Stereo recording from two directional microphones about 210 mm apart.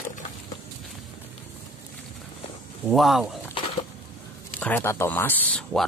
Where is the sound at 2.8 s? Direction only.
Centre (ahead or behind).